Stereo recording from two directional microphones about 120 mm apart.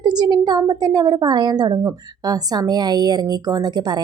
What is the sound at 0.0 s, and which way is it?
A woman's voice, 35° right (ahead or behind).